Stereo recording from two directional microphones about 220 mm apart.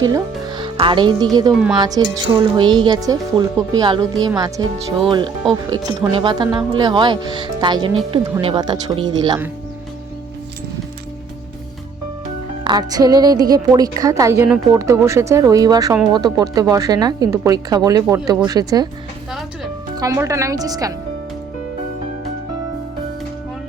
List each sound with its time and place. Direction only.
0.0 s a woman's voice: 20° right (ahead or behind)
12.6 s a woman's voice: 20° right (ahead or behind)
20.0 s a woman's voice: 15° right (ahead or behind)